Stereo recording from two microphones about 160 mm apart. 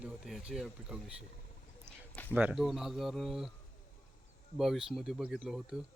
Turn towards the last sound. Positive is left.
turn(degrees=-5)  # may be behind; listen again after turning